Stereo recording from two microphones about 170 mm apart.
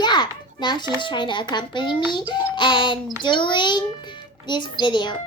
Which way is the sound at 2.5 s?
30° left (ahead or behind).